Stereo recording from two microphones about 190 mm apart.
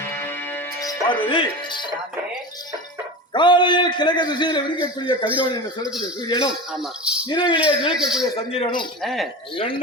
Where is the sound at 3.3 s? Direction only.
25° left (ahead or behind).